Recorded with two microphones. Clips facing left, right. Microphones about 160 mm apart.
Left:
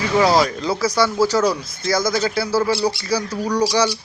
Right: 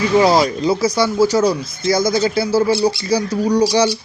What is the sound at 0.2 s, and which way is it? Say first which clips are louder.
Speech: right 1 dB; 20° right (ahead or behind).